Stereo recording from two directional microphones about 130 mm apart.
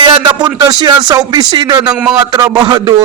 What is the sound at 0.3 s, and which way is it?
A man's voice, 30° right (ahead or behind).